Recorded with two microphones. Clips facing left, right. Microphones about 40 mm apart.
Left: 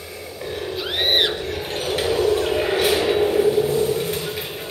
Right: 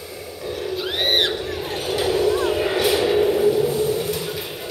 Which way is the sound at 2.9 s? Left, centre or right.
Left.